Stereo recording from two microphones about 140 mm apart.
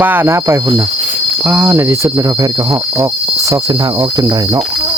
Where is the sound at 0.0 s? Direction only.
15° right (ahead or behind).